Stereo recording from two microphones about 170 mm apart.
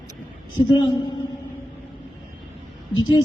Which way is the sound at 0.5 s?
25° left (ahead or behind).